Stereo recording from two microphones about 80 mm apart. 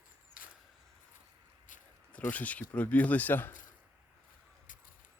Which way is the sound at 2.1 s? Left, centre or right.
Centre.